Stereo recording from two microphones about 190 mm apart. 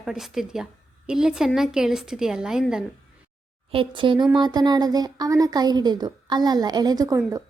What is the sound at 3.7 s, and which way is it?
A woman's voice, 25° right (ahead or behind).